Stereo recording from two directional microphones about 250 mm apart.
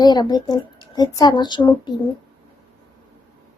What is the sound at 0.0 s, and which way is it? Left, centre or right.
Speech, centre.